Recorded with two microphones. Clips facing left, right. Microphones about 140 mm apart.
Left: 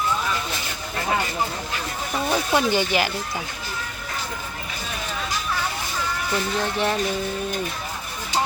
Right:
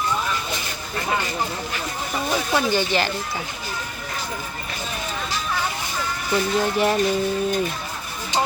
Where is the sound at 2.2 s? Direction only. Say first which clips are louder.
Left 1 dB; 15° left (ahead or behind).